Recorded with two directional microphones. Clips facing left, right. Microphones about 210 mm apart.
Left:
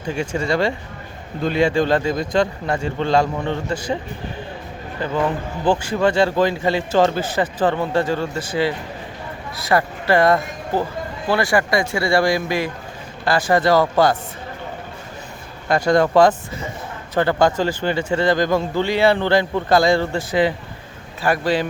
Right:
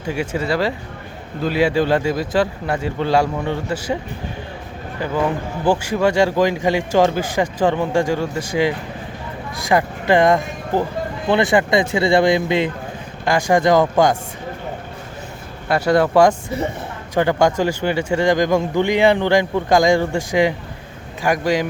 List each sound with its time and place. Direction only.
0.1 s a man's voice: 5° right (ahead or behind)
5.0 s a man's voice: 10° right (ahead or behind)
15.7 s a man's voice: 10° right (ahead or behind)